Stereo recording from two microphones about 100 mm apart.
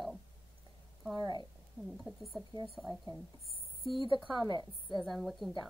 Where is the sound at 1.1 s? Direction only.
45° right (ahead or behind).